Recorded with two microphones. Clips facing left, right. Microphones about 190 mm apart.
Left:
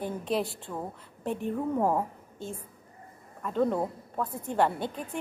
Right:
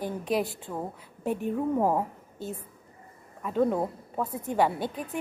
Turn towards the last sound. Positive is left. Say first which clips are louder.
# right 1 dB
turn(degrees=-5)  # may be behind; listen again after turning